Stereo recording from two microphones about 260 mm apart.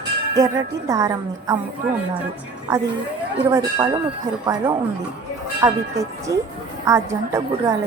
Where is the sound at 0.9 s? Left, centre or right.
Centre.